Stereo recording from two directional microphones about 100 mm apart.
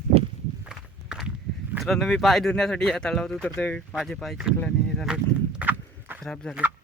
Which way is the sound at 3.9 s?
Centre (ahead or behind).